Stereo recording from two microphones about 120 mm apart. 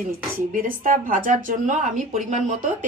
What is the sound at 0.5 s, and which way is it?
Speech, 90° right.